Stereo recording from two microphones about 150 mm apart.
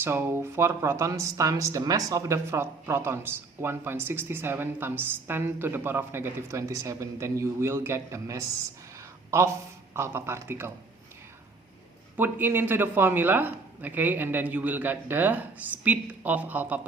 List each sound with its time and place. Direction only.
0.0 s speech: 15° right (ahead or behind)
12.1 s speech: 15° right (ahead or behind)